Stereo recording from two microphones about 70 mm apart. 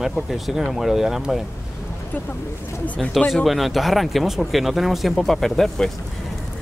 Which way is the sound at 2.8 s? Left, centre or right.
Left.